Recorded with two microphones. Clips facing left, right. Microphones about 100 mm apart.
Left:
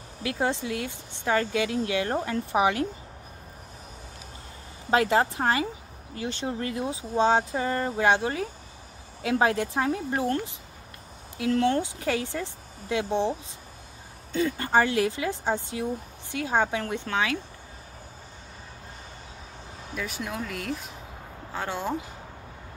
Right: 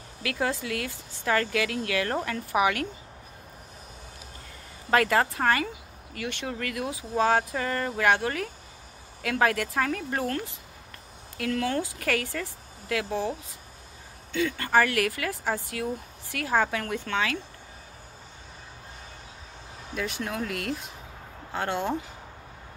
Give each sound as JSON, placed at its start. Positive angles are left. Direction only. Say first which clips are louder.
{"t": 0.2, "sound": "speech", "louder": "left 2 dB", "side_deg": 25}
{"t": 4.9, "sound": "speech", "louder": "left 1 dB", "side_deg": 25}
{"t": 14.6, "sound": "speech", "louder": "even", "side_deg": 25}
{"t": 20.0, "sound": "speech", "louder": "right 2 dB", "side_deg": 0}